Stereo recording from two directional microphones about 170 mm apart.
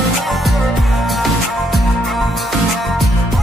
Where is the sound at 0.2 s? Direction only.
Centre (ahead or behind).